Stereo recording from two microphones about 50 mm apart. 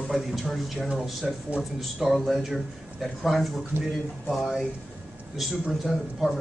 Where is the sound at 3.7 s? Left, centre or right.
Right.